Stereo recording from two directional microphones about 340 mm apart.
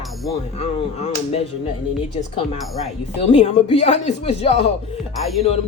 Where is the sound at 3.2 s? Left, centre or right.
Centre.